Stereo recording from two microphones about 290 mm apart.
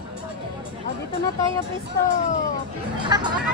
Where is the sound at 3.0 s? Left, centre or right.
Centre.